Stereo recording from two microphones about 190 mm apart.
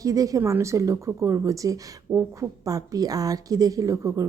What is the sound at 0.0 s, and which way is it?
Speech, 20° right (ahead or behind).